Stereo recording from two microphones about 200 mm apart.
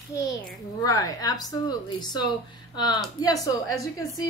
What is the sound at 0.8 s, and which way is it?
A woman's voice, 20° left (ahead or behind).